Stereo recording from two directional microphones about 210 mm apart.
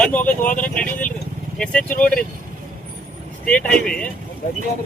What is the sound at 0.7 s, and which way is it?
Speech, 5° left (ahead or behind).